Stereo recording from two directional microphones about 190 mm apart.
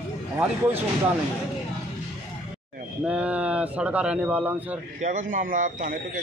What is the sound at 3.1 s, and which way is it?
A man's voice, 5° right (ahead or behind).